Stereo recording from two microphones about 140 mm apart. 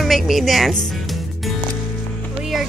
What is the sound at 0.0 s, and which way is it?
Music, centre (ahead or behind).